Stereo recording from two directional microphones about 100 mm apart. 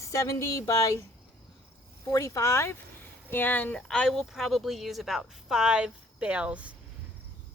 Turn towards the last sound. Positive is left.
turn(degrees=-10)  # may be behind; listen again after turning